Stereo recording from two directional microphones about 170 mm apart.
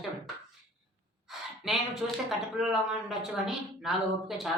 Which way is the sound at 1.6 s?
Centre (ahead or behind).